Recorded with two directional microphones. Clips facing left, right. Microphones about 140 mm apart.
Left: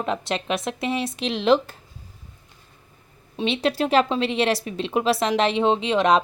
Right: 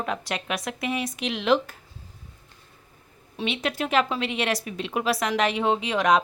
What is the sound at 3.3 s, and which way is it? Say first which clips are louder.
A woman's voice: left 5 dB; 30° left (ahead or behind).